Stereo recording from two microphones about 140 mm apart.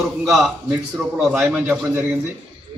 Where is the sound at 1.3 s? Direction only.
10° right (ahead or behind).